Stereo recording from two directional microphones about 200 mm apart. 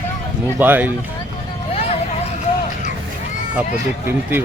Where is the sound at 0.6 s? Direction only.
10° right (ahead or behind).